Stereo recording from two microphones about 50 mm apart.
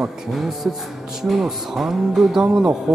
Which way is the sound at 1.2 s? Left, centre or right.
Centre.